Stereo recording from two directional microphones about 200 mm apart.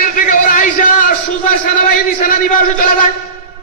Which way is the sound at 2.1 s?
45° left (ahead or behind).